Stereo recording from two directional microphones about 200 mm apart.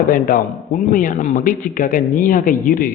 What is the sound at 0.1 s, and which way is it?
A man's voice, 45° left (ahead or behind).